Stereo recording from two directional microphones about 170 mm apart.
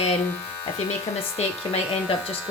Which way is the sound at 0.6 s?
25° left (ahead or behind).